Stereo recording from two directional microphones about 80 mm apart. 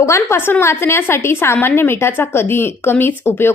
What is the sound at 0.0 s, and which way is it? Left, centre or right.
A woman's voice, left.